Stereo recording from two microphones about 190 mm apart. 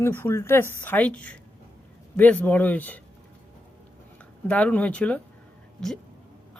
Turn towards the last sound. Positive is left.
turn(degrees=5)  # may be behind; listen again after turning